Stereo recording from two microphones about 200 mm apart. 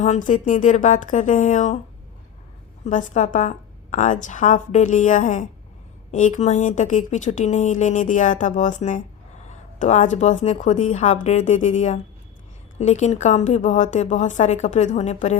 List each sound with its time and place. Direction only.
0.0 s a woman's voice: 40° left (ahead or behind)
2.8 s a woman's voice: 40° left (ahead or behind)